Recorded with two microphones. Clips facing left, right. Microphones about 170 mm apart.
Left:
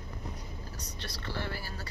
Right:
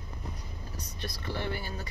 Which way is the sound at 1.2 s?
20° right (ahead or behind).